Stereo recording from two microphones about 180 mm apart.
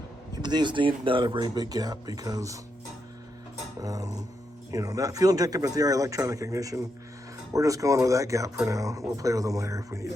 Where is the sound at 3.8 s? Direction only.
20° right (ahead or behind).